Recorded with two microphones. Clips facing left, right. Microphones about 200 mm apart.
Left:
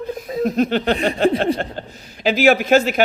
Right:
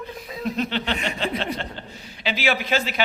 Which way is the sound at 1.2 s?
50° left (ahead or behind).